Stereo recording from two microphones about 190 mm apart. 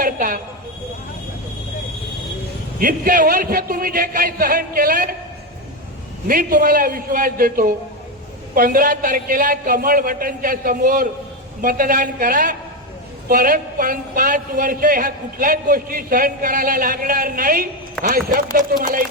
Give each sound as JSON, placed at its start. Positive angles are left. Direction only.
{"t": 0.0, "sound": "a sound", "side_deg": -45}
{"t": 2.7, "sound": "a man's voice", "side_deg": -45}
{"t": 6.2, "sound": "a man's voice", "side_deg": -45}